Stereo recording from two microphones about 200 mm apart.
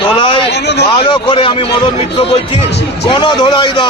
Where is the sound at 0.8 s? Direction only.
25° left (ahead or behind).